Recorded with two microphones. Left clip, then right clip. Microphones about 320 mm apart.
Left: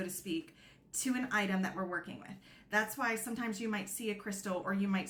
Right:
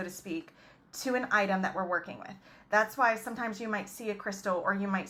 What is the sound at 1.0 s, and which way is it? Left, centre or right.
A woman's voice, centre.